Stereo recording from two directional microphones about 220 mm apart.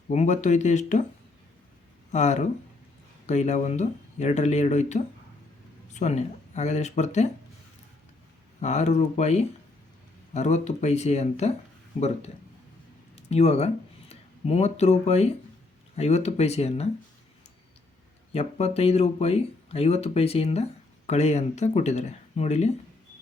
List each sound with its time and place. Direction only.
0.1 s speech: 30° left (ahead or behind)
2.1 s speech: 30° left (ahead or behind)
8.6 s speech: 30° left (ahead or behind)
18.3 s speech: 30° left (ahead or behind)